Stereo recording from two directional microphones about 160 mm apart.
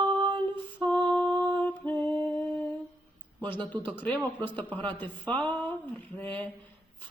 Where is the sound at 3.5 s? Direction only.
10° left (ahead or behind).